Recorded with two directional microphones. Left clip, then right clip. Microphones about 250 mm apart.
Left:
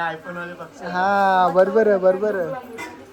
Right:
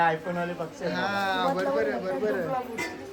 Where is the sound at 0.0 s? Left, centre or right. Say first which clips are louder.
Right 2 dB; right.